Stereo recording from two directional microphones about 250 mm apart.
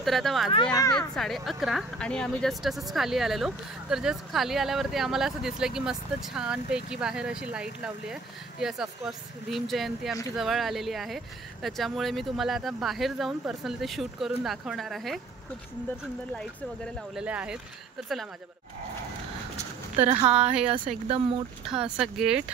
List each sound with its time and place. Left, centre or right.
0.0 s speech: centre
0.7 s speech: centre
0.9 s speech: centre
16.3 s speech: centre
20.1 s speech: right
21.6 s speech: centre